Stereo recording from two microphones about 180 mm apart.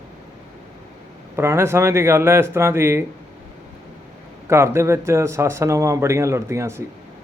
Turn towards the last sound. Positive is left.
turn(degrees=-15)  # may be behind; listen again after turning